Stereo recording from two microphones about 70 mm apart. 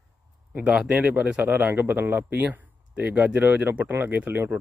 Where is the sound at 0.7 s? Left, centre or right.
Centre.